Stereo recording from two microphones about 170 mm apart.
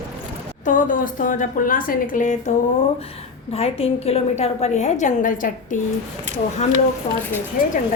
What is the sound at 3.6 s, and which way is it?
A woman's voice, 35° left (ahead or behind).